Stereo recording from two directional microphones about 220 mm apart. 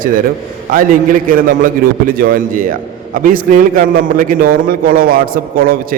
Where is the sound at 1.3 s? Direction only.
40° right (ahead or behind).